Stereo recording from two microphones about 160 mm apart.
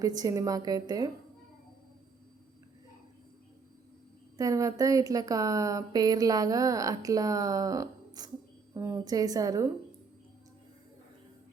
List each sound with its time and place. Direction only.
0.0 s speech: 25° right (ahead or behind)
4.4 s speech: 20° right (ahead or behind)